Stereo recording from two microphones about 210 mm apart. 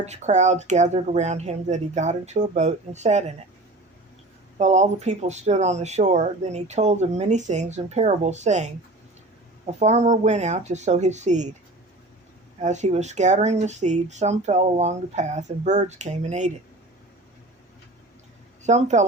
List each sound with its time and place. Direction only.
0.0 s speech: 35° right (ahead or behind)
4.5 s speech: 35° right (ahead or behind)
9.6 s speech: 30° right (ahead or behind)
12.5 s speech: 35° right (ahead or behind)
18.6 s speech: 35° right (ahead or behind)